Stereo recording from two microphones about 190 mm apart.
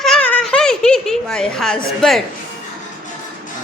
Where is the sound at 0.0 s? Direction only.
5° left (ahead or behind).